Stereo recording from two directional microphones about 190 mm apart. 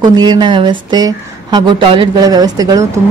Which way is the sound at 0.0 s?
20° right (ahead or behind).